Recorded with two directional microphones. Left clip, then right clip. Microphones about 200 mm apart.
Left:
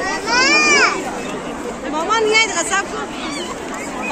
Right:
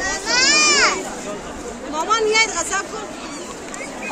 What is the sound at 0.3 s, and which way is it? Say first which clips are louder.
Children playing: left 2 dB; 65° right (ahead or behind).